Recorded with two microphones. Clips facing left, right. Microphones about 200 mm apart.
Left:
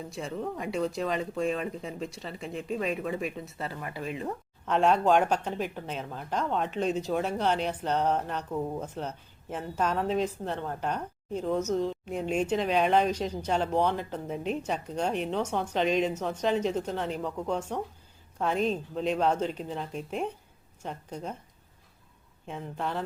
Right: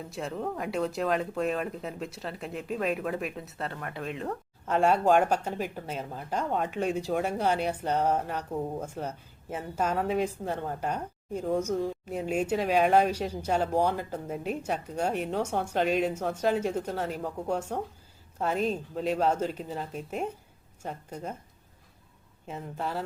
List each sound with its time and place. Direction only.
0.1 s speech: centre (ahead or behind)
4.6 s speech: 10° right (ahead or behind)
22.4 s speech: 5° right (ahead or behind)